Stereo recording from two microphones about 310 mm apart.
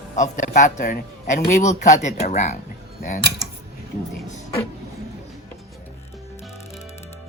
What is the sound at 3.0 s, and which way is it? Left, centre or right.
Mechanisms, left.